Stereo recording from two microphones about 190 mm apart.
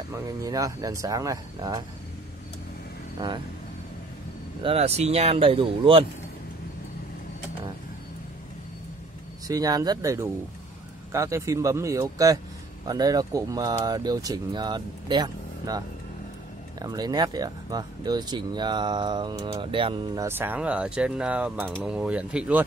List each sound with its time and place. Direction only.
0.1 s speech: 20° right (ahead or behind)
4.6 s speech: 35° right (ahead or behind)
9.5 s speech: 20° right (ahead or behind)
16.8 s speech: 20° right (ahead or behind)
20.2 s speech: 10° right (ahead or behind)